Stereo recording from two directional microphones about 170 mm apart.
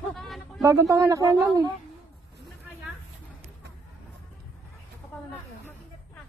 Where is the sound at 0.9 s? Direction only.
20° right (ahead or behind).